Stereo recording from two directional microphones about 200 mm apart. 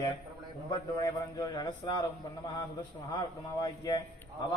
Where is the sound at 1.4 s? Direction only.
20° left (ahead or behind).